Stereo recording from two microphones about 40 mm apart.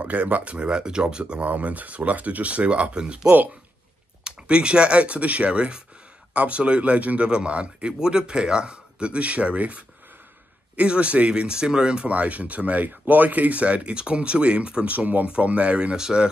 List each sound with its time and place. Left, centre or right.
0.0 s speech: right
1.4 s speech: right
4.2 s speech: right
8.0 s speech: centre
12.1 s speech: right
14.9 s speech: right
16.0 s speech: centre